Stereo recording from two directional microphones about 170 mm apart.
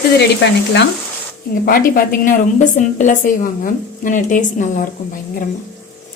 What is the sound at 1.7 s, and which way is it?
A woman's voice, 55° left (ahead or behind).